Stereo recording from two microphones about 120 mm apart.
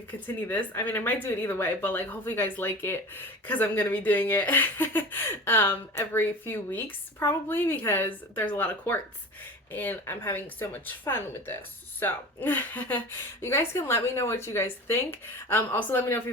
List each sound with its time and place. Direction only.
0.4 s speech: 15° left (ahead or behind)